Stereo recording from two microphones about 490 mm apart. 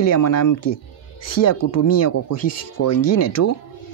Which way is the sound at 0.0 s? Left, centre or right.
Left.